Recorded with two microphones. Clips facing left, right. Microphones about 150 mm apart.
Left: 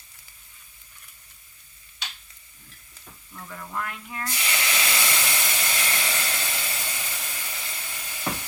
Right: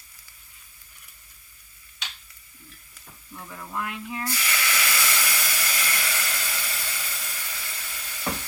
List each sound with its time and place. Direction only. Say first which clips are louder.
3.3 s speech: even; 15° right (ahead or behind)
4.3 s steam: left 3 dB; 20° left (ahead or behind)